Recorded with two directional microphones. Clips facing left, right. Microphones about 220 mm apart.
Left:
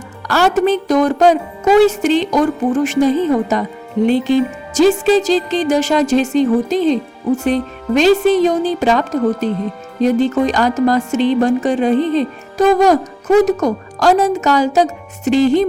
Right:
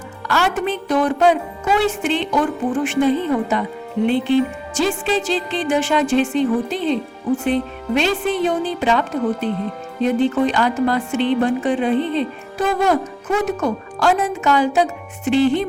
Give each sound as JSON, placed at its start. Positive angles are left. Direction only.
{"t": 0.3, "sound": "music", "side_deg": 40}